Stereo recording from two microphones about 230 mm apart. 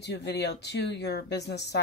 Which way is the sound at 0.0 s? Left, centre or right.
Left.